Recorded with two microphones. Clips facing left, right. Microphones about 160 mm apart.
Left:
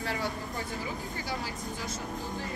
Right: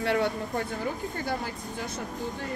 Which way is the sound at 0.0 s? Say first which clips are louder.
Right 7 dB; 65° right (ahead or behind).